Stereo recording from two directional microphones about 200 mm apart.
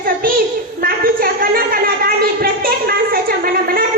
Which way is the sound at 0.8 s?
45° right (ahead or behind).